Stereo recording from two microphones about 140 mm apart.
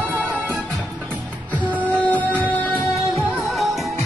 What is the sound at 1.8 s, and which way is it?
Music, 10° left (ahead or behind).